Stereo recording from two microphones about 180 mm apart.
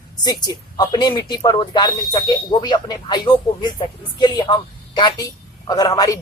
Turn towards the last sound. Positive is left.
turn(degrees=20)  # may be behind; listen again after turning